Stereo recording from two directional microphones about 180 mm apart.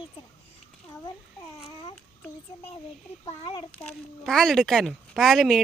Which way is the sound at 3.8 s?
5° left (ahead or behind).